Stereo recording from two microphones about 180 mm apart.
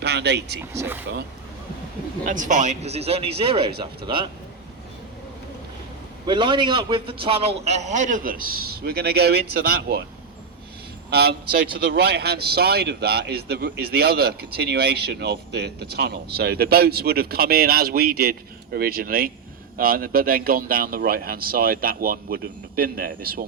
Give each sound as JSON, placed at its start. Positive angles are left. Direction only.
{"t": 0.0, "sound": "speech", "side_deg": -70}
{"t": 0.8, "sound": "speech", "side_deg": -10}
{"t": 2.2, "sound": "speech", "side_deg": -45}
{"t": 6.2, "sound": "a man's voice", "side_deg": -25}
{"t": 11.1, "sound": "speech", "side_deg": -65}